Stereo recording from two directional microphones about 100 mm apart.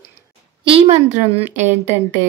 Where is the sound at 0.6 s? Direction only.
75° right (ahead or behind).